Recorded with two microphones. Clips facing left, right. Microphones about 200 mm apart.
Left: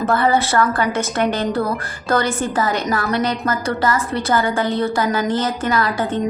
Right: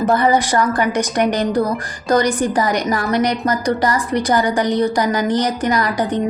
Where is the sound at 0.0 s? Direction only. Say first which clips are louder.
Right 2 dB; 15° right (ahead or behind).